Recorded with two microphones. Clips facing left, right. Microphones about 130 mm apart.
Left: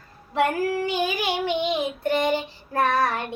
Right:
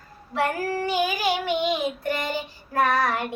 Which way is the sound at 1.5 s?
25° left (ahead or behind).